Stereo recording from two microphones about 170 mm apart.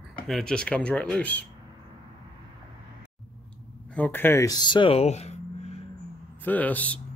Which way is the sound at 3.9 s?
10° left (ahead or behind).